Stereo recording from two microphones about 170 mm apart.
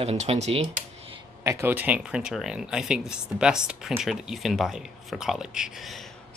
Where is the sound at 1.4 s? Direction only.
15° right (ahead or behind).